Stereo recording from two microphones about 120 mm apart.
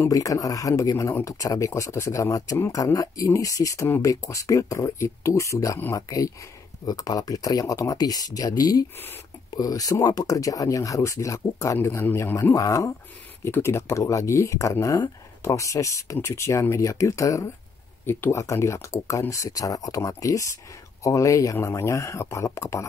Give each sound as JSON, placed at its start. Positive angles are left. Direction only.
{"t": 0.1, "sound": "speech", "side_deg": 30}